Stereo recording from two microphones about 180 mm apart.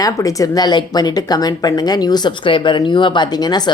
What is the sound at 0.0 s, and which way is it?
Speech, 20° left (ahead or behind).